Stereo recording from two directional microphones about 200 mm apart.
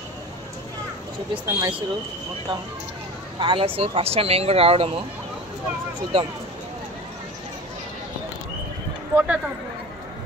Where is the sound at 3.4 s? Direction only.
25° right (ahead or behind).